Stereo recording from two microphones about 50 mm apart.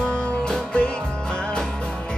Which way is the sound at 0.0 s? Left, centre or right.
Left.